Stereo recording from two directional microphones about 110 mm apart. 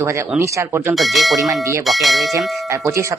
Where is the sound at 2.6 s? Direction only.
25° right (ahead or behind).